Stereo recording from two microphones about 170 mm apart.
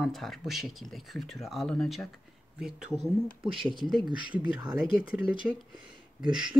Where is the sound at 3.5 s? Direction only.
30° right (ahead or behind).